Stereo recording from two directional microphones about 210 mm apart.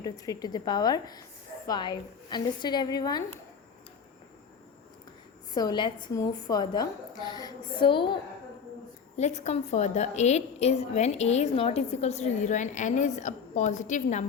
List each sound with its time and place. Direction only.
0.0 s a woman's voice: 20° left (ahead or behind)
5.5 s a woman's voice: 20° left (ahead or behind)